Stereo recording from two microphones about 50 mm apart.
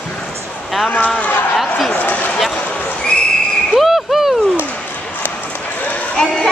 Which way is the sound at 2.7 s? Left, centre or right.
Left.